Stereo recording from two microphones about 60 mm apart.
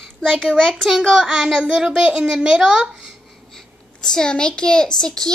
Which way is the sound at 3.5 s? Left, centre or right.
Centre.